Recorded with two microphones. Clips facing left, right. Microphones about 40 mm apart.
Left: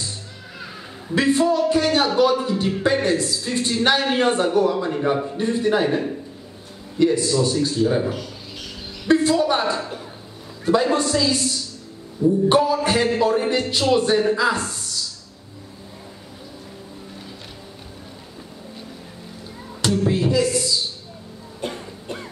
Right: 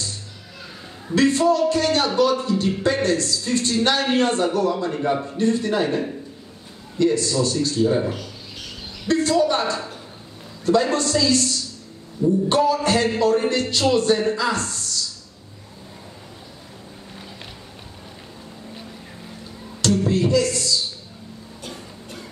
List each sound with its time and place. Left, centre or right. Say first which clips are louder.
1.1 s a woman's voice: right 1 dB; centre
9.0 s a woman's voice: left 1 dB; centre
20.1 s music: left 1 dB; centre
21.5 s music: left 8 dB; left